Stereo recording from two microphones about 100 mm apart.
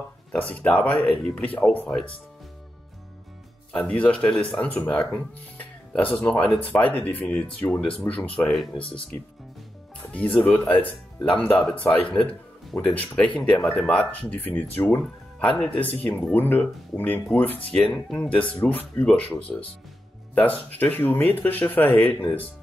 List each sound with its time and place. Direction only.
0.3 s speech: 15° left (ahead or behind)
3.7 s speech: 10° left (ahead or behind)
10.1 s speech: 10° left (ahead or behind)
13.6 s speech: centre (ahead or behind)
13.8 s speech: 15° left (ahead or behind)
19.5 s speech: 5° left (ahead or behind)
20.3 s speech: 15° left (ahead or behind)